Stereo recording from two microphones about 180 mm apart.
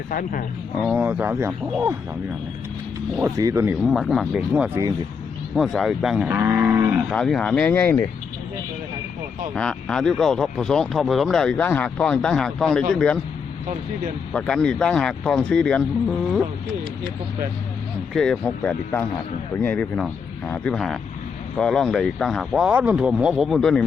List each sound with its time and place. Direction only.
0.1 s speech: 50° left (ahead or behind)
0.8 s speech: 5° right (ahead or behind)
3.2 s speech: 15° right (ahead or behind)
3.8 s speech: centre (ahead or behind)
7.1 s speech: 5° left (ahead or behind)
9.6 s speech: 5° left (ahead or behind)
14.3 s speech: 5° left (ahead or behind)
18.1 s speech: 5° left (ahead or behind)